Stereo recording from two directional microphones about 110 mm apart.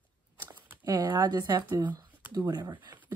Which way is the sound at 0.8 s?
35° right (ahead or behind).